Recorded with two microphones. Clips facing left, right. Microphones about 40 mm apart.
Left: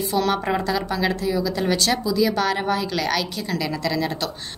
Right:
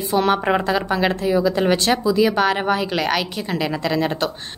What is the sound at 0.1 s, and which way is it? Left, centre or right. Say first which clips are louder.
A woman's voice: right 5 dB; right.